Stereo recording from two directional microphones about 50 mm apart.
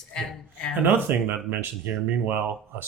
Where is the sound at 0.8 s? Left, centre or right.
Right.